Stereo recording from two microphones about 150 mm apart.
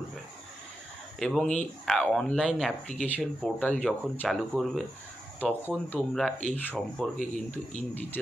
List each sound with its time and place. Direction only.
1.2 s speech: 5° left (ahead or behind)
5.9 s speech: 5° left (ahead or behind)